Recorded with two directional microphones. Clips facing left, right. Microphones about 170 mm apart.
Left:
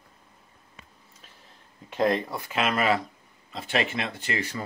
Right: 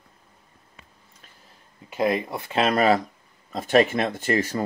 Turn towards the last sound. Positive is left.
turn(degrees=-45)  # may be behind; listen again after turning